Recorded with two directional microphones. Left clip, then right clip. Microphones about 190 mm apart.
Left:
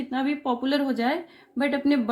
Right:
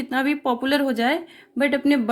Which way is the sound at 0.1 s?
45° right (ahead or behind).